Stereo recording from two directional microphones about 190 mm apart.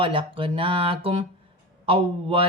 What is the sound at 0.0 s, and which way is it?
A man's voice, 25° right (ahead or behind).